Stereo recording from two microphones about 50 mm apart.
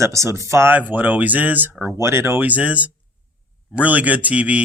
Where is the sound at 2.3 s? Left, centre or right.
Right.